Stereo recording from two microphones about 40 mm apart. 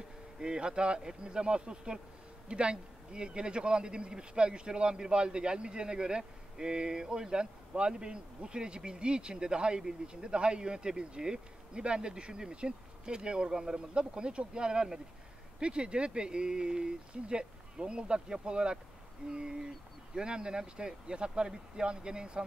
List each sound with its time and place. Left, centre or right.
0.4 s speech: centre